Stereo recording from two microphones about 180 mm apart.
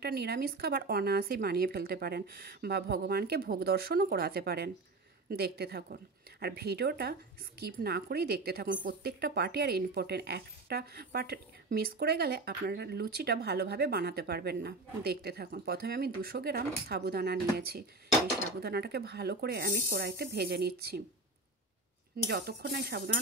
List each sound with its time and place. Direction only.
0.0 s a woman's voice: 60° right (ahead or behind)
22.3 s a woman's voice: 60° right (ahead or behind)